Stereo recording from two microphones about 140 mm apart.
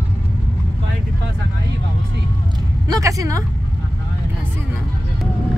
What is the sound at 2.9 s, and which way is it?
Speech, 25° right (ahead or behind).